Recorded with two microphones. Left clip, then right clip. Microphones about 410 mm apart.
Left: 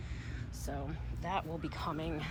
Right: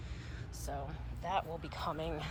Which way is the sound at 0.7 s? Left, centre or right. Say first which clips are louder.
Even; centre.